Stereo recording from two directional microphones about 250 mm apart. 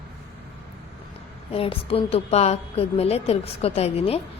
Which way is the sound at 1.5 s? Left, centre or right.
Left.